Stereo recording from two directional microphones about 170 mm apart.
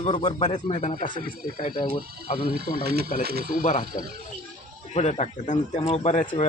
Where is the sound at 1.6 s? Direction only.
30° left (ahead or behind).